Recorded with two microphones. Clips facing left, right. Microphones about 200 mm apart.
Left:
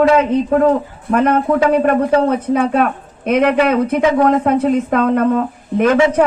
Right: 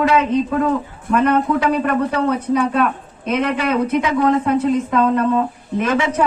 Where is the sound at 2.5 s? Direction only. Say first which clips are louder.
Left 2 dB; 50° left (ahead or behind).